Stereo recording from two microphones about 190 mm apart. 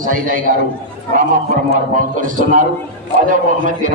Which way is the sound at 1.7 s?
45° right (ahead or behind).